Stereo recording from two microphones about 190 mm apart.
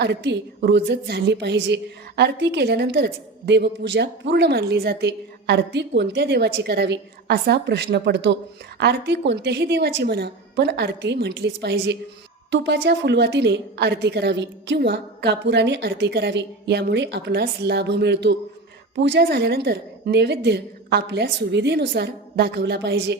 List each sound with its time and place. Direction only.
0.0 s a woman's voice: 65° right (ahead or behind)